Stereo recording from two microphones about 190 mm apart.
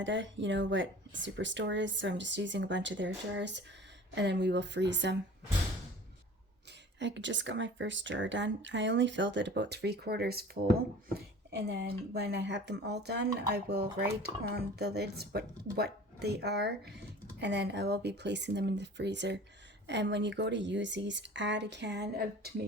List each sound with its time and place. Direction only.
0.0 s speech: 75° right (ahead or behind)
7.0 s speech: 70° right (ahead or behind); by 10.6 s 55° right (ahead or behind)
11.5 s speech: 70° right (ahead or behind)